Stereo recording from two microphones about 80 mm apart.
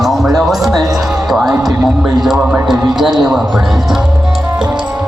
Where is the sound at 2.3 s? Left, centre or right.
Centre.